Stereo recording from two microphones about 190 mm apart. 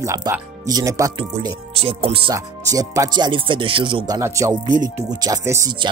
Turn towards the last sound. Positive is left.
turn(degrees=-20)  # may be behind; listen again after turning